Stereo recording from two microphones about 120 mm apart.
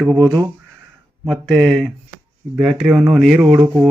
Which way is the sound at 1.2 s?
5° left (ahead or behind).